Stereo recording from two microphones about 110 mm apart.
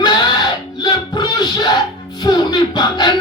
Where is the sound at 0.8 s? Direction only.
40° left (ahead or behind).